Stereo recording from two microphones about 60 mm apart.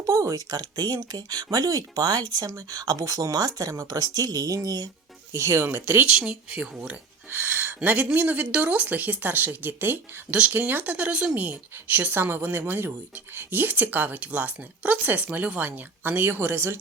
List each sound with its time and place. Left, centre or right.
0.0 s speech: right
5.4 s speech: right
6.1 s speech: centre
7.3 s a sound: right
7.9 s speech: right